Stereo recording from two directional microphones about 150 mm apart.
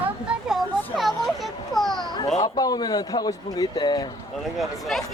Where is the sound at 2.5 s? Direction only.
25° left (ahead or behind).